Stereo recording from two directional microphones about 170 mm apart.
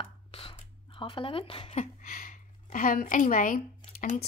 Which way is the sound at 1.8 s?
55° left (ahead or behind).